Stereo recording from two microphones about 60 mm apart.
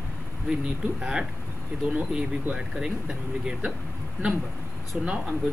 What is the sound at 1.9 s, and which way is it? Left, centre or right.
Speech, right.